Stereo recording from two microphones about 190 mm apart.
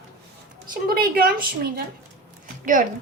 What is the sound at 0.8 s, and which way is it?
Speech, 50° right (ahead or behind).